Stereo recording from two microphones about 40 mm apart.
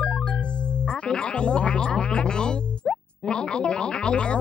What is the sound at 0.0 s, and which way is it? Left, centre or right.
Speech, left.